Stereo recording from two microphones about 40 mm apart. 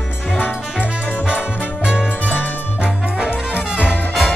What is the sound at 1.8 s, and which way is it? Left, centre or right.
Music, right.